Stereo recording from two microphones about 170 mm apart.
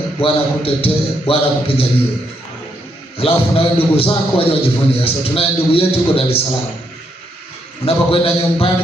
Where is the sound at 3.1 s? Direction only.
35° left (ahead or behind).